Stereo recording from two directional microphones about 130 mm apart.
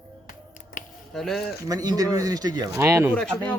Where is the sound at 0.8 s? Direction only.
90° left.